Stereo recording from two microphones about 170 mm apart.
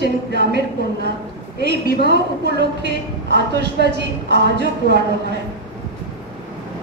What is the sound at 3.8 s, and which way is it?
A woman's voice, 90° right.